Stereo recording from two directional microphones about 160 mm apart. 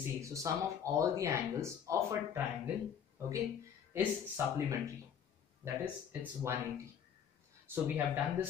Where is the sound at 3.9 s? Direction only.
15° right (ahead or behind).